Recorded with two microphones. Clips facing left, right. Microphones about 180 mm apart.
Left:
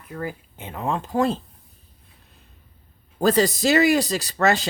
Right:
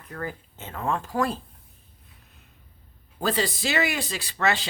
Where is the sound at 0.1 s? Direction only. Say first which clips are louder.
Left 3 dB; 10° left (ahead or behind).